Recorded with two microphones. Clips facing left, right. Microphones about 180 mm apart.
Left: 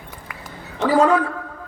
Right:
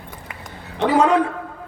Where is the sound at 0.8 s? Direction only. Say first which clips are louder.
Even; 20° right (ahead or behind).